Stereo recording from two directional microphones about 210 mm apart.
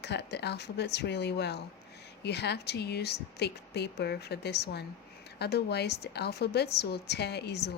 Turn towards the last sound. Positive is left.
turn(degrees=50)  # may be behind; listen again after turning